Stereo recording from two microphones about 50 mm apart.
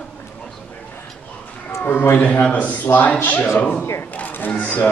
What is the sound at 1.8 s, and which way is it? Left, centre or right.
Speech, left.